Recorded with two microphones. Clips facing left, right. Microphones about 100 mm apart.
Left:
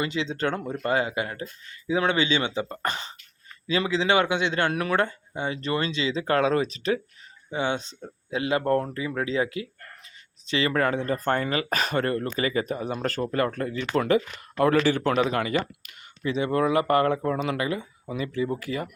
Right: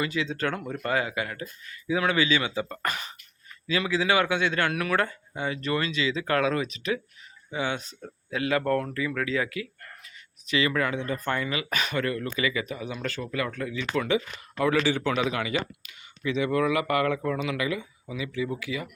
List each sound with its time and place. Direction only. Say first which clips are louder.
0.0 s a man's voice: left 1 dB; 25° left (ahead or behind); by 18.9 s 45° left (ahead or behind)